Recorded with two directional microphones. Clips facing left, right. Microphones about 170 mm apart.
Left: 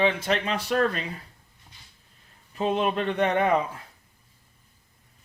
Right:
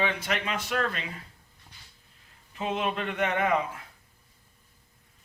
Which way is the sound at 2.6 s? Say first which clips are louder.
Left 5 dB; 35° left (ahead or behind).